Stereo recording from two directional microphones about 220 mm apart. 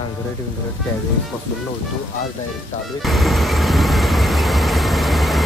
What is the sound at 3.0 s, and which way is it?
Vehicle, centre (ahead or behind).